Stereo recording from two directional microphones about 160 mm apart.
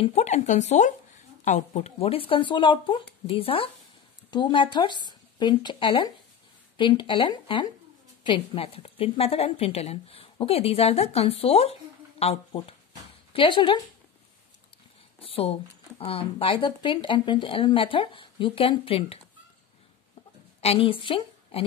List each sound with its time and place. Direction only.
0.0 s a woman's voice: 45° left (ahead or behind)
15.1 s a sound: 35° left (ahead or behind)
16.0 s a woman's voice: 35° left (ahead or behind)
20.6 s a woman's voice: 35° left (ahead or behind)